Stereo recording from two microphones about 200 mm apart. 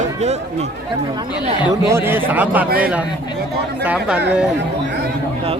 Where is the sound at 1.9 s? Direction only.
10° right (ahead or behind).